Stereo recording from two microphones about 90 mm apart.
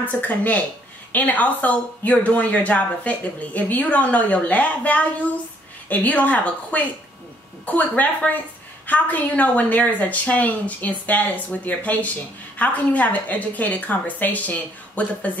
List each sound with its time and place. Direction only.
0.0 s speech: 15° left (ahead or behind)